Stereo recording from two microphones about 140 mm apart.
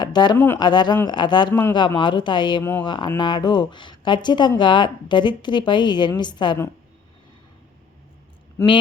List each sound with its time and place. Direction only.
0.0 s a sound: 30° left (ahead or behind)
0.3 s speech: 15° left (ahead or behind)
0.6 s speech: 30° left (ahead or behind)
8.6 s speech: 20° left (ahead or behind)